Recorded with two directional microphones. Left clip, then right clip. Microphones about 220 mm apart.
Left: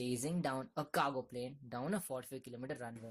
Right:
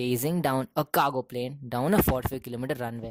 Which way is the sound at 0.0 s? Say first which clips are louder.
Right 12 dB; 35° right (ahead or behind).